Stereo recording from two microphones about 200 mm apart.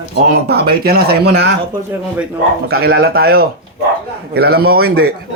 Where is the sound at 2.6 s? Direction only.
50° right (ahead or behind).